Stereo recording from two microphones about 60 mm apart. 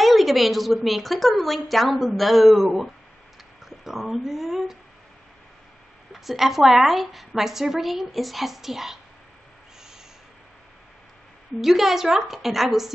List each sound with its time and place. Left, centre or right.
0.0 s a woman's voice: centre
6.1 s a woman's voice: centre
11.6 s a woman's voice: centre